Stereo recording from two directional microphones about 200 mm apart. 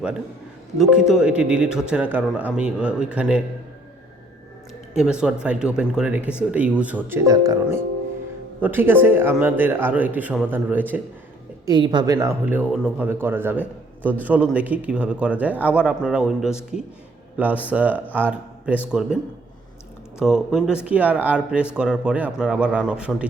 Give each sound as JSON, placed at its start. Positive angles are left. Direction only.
{"t": 0.8, "sound": "speech", "side_deg": -5}
{"t": 4.9, "sound": "speech", "side_deg": -5}
{"t": 11.6, "sound": "speech", "side_deg": -20}